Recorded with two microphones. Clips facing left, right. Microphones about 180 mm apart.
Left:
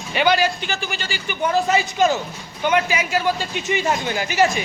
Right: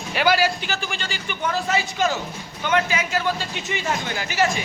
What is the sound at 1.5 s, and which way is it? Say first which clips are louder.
A man's voice: left 5 dB; 15° left (ahead or behind).